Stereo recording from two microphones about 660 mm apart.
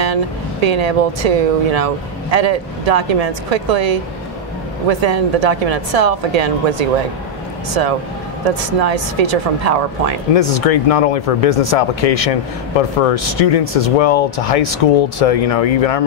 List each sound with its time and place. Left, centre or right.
0.0 s a woman's voice: right
8.7 s speech: right
10.3 s speech: left